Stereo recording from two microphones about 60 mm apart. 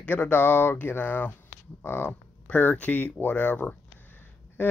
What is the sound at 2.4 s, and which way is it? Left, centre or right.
Speech, left.